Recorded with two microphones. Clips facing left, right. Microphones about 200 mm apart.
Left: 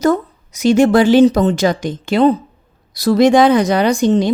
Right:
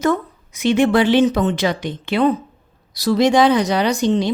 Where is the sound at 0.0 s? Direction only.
40° left (ahead or behind).